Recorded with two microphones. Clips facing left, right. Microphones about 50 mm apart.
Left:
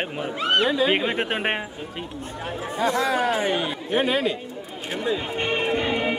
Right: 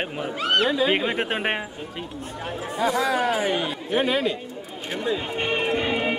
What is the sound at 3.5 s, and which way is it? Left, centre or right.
Speech, centre.